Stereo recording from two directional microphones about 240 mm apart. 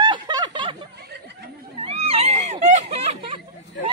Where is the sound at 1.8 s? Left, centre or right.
Right.